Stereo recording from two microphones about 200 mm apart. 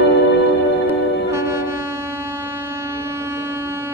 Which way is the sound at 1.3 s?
15° right (ahead or behind).